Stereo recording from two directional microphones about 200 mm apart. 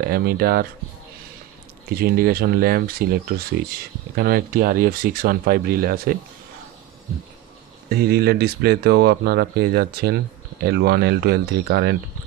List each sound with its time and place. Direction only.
0.1 s speech: 50° right (ahead or behind)
2.0 s speech: 50° right (ahead or behind)
7.9 s speech: 50° right (ahead or behind)